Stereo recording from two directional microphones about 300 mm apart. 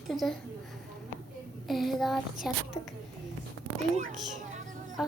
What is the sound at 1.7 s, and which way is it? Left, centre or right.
A woman's voice, centre.